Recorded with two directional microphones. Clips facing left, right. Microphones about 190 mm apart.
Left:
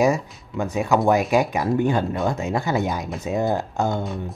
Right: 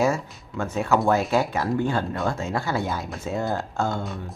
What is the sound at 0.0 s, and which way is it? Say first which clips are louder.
Speech: left 3 dB; 15° left (ahead or behind).